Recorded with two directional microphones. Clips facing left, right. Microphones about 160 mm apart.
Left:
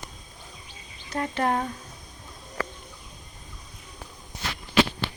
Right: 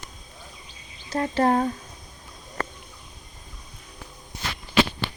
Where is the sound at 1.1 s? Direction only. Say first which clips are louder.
Right 4 dB; 35° right (ahead or behind).